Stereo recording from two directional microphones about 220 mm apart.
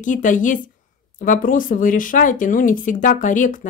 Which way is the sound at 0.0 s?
35° left (ahead or behind).